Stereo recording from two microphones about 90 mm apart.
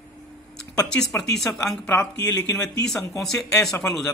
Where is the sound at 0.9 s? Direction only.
10° left (ahead or behind).